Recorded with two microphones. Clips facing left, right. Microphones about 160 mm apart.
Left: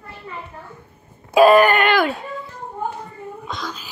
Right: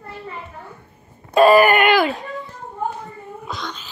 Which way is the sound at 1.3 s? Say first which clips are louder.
Even; centre (ahead or behind).